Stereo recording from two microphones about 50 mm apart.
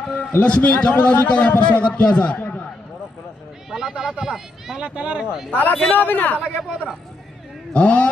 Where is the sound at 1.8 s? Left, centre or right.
Left.